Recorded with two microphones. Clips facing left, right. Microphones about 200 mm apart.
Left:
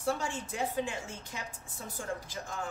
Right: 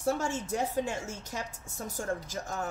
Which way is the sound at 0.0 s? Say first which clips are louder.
Right 3 dB; 40° right (ahead or behind).